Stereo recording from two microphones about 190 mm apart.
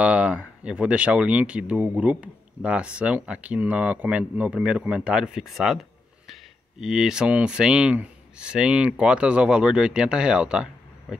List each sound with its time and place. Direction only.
0.0 s speech: 5° right (ahead or behind)